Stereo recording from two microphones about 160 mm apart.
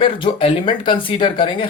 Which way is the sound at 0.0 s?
35° left (ahead or behind).